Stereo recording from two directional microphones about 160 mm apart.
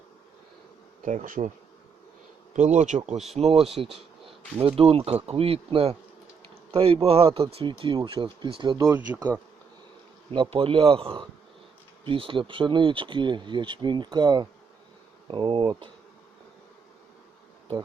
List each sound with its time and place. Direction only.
1.0 s speech: 55° right (ahead or behind)
2.6 s speech: 50° right (ahead or behind); by 9.0 s 25° right (ahead or behind)
10.3 s speech: 30° right (ahead or behind)